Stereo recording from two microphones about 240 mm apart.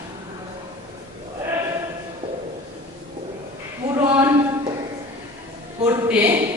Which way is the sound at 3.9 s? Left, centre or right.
Centre.